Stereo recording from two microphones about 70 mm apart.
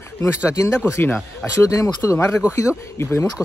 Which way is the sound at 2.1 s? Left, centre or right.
Left.